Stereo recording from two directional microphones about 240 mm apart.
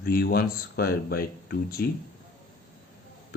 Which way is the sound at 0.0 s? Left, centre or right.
Left.